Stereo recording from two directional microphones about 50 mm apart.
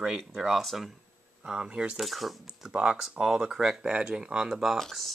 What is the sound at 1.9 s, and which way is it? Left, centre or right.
Speech, centre.